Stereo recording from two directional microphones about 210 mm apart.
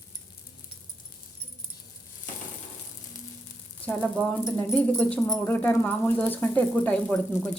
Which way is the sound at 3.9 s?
10° left (ahead or behind).